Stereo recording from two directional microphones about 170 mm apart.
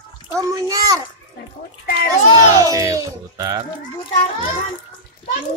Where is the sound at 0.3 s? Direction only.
20° right (ahead or behind).